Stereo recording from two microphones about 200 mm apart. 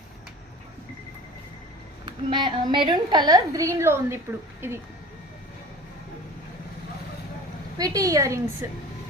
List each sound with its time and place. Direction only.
2.0 s a woman's voice: 25° right (ahead or behind)
7.8 s a woman's voice: 15° right (ahead or behind)